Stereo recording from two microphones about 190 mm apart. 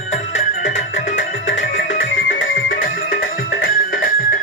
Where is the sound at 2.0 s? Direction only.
80° left.